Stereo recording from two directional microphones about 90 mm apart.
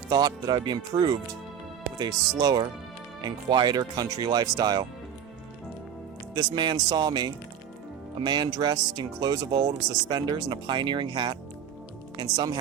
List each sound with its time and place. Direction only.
0.1 s speech: 50° right (ahead or behind)
2.4 s speech: 50° right (ahead or behind)
6.3 s speech: 50° right (ahead or behind)